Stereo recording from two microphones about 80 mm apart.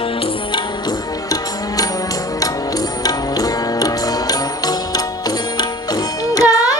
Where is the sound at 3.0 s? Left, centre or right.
Left.